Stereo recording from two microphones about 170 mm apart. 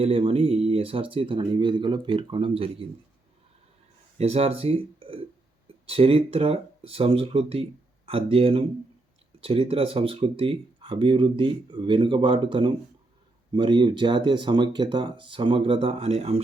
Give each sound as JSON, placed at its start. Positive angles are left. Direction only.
{"t": 0.0, "sound": "speech", "side_deg": -30}
{"t": 4.2, "sound": "speech", "side_deg": -40}